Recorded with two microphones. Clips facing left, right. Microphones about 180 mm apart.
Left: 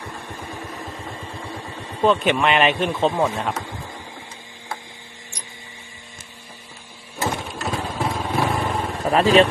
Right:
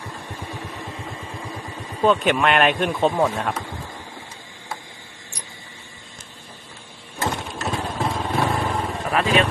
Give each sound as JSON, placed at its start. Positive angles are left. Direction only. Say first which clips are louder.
{"t": 2.0, "sound": "a man's voice", "louder": "even", "side_deg": 0}
{"t": 7.2, "sound": "vehicle", "louder": "left 1 dB", "side_deg": 5}
{"t": 9.0, "sound": "speech", "louder": "left 6 dB", "side_deg": 35}